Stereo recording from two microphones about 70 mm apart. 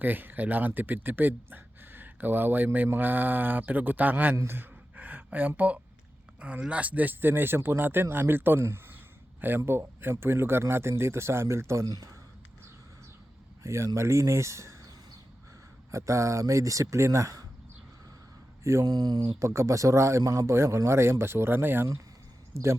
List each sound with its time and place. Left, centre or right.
0.0 s speech: right
4.4 s a sound: right
6.4 s speech: centre; by 11.9 s right
11.9 s speech: right
13.6 s speech: right
15.9 s speech: right
18.6 s speech: right
18.9 s speech: right
19.4 s speech: right
20.5 s speech: right